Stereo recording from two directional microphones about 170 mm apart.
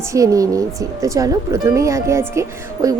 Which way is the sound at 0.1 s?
20° right (ahead or behind).